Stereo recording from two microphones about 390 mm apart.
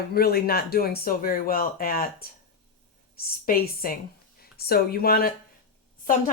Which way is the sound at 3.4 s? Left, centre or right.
Left.